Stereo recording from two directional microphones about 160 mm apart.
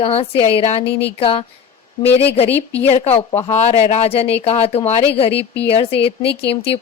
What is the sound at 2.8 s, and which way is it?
A woman's voice, 40° left (ahead or behind).